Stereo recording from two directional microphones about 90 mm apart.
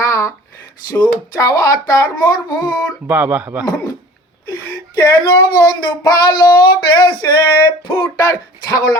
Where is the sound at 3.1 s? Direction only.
20° right (ahead or behind).